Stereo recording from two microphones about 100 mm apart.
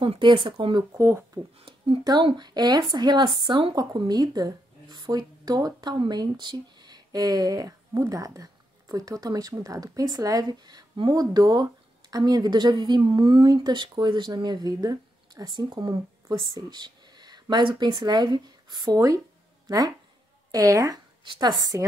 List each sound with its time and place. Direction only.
0.0 s speech: 60° right (ahead or behind)
0.9 s speech: 25° right (ahead or behind)
1.6 s a sound: 65° right (ahead or behind)
2.3 s speech: 45° right (ahead or behind)
18.9 s speech: 35° right (ahead or behind)
20.5 s speech: 35° right (ahead or behind)
21.2 s speech: 50° right (ahead or behind)